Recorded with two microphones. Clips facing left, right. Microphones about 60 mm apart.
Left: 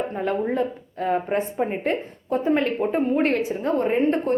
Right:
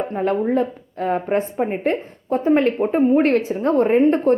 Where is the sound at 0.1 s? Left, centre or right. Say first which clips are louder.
Right 5 dB; right.